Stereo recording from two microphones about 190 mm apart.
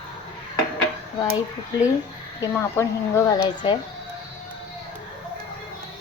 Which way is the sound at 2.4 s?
15° left (ahead or behind).